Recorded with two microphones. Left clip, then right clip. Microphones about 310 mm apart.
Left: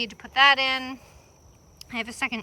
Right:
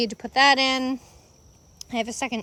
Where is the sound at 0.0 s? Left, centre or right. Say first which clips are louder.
Even; centre.